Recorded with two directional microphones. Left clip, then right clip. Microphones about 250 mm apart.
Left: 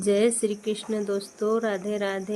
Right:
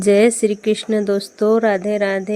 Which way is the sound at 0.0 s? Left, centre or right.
Right.